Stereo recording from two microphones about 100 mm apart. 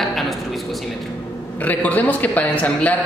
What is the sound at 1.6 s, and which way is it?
A man's voice, 15° left (ahead or behind).